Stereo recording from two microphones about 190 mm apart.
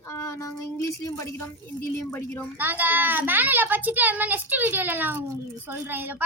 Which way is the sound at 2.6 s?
10° right (ahead or behind).